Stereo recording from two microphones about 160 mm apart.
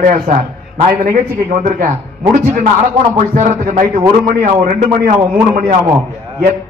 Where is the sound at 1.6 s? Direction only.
50° right (ahead or behind).